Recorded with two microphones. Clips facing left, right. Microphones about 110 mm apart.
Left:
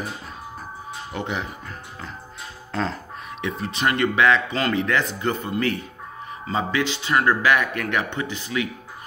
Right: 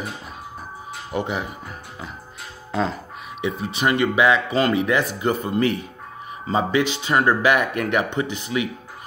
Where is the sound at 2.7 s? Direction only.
5° right (ahead or behind).